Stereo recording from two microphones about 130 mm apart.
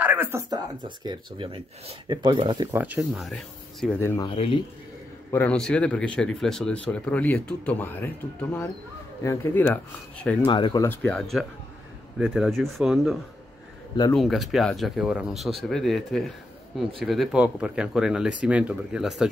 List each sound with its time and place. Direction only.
0.0 s speech: 15° right (ahead or behind)
0.8 s speech: 40° right (ahead or behind)
2.7 s speech: 15° right (ahead or behind)
3.0 s speech: centre (ahead or behind)
4.3 s a man's voice: 45° left (ahead or behind)
5.3 s speech: 10° left (ahead or behind)
10.4 s speech: 35° left (ahead or behind)
10.8 s speech: 15° left (ahead or behind)
14.1 s speech: centre (ahead or behind)